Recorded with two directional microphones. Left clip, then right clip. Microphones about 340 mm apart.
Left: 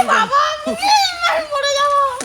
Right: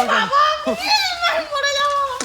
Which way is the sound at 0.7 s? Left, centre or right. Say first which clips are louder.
Left 4 dB; centre.